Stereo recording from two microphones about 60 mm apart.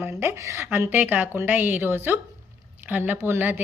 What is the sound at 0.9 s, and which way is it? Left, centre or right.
A woman's voice, right.